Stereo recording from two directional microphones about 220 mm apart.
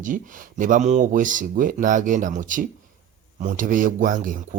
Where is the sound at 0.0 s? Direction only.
35° right (ahead or behind).